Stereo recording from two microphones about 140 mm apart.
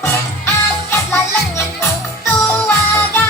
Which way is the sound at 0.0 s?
15° left (ahead or behind).